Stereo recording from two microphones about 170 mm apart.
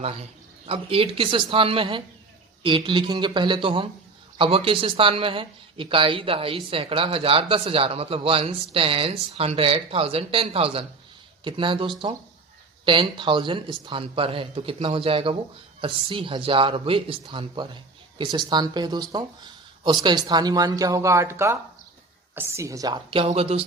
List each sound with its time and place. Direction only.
0.0 s speech: 35° right (ahead or behind)